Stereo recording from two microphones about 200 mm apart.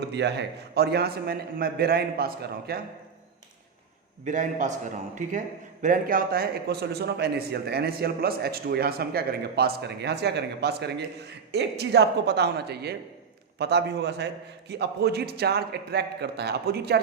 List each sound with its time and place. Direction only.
0.1 s a man's voice: 60° right (ahead or behind)
4.3 s a man's voice: 40° right (ahead or behind)